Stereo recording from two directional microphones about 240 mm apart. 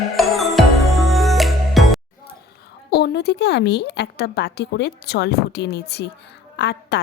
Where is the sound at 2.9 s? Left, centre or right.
Left.